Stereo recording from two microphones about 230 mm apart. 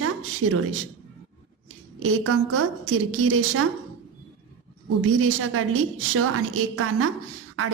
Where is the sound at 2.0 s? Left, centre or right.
Right.